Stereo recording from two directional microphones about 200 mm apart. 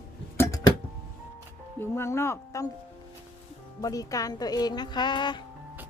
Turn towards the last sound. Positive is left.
turn(degrees=20)  # may be behind; listen again after turning